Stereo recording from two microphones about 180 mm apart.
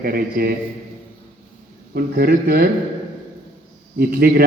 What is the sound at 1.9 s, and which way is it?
Speech, 60° right (ahead or behind).